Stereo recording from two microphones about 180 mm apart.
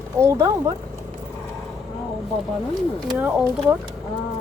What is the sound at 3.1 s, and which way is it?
Speech, 5° right (ahead or behind).